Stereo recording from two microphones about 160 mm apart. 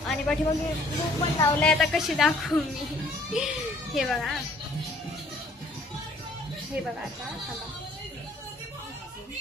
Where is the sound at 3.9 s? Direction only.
Centre (ahead or behind).